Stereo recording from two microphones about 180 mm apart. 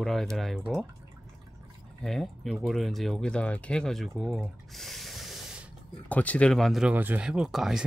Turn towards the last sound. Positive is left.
turn(degrees=0)  # may be behind; listen again after turning